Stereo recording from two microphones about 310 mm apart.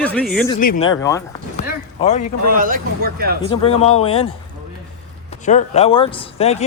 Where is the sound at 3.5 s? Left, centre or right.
Centre.